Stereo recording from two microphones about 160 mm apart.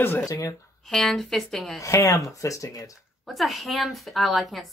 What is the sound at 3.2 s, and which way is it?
Speech, centre (ahead or behind).